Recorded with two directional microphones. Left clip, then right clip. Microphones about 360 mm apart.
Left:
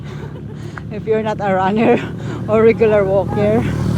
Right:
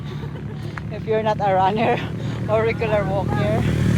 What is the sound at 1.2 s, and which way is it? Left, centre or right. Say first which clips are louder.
Speech: right 3 dB; centre.